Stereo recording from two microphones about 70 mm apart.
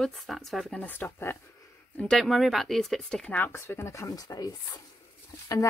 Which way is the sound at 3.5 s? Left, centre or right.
Left.